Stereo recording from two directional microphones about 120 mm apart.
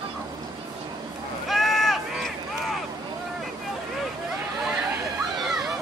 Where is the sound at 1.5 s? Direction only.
Centre (ahead or behind).